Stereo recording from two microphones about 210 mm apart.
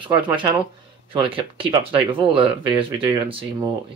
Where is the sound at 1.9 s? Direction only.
5° right (ahead or behind).